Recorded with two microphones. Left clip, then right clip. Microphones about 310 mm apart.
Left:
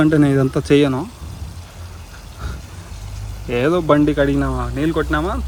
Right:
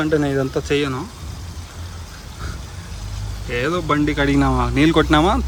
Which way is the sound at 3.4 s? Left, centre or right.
Centre.